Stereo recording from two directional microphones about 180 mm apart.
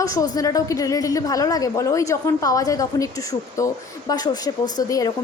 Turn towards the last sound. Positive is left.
turn(degrees=20)  # may be behind; listen again after turning